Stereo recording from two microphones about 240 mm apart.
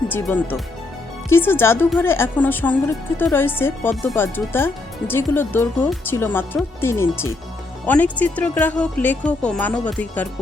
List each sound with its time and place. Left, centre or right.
0.1 s a woman's voice: centre